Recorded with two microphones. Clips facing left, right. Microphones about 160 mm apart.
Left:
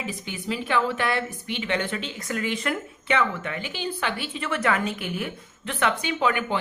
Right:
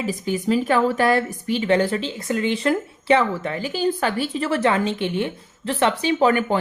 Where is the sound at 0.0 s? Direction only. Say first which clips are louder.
Right 9 dB; 40° right (ahead or behind).